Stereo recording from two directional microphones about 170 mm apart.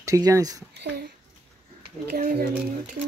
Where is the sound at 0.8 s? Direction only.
80° right.